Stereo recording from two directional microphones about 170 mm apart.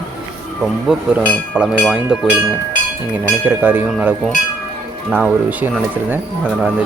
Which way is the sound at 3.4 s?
10° right (ahead or behind).